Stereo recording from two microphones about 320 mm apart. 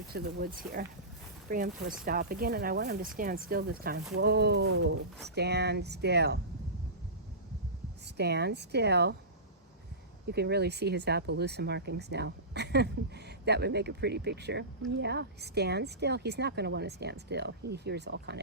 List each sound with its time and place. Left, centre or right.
0.1 s speech: right
8.0 s speech: right
10.2 s speech: right